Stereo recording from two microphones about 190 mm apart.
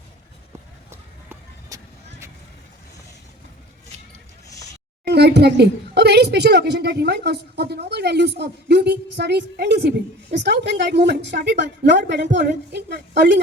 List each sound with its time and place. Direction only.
0.9 s run: 15° right (ahead or behind)
5.0 s a woman's voice: 60° right (ahead or behind)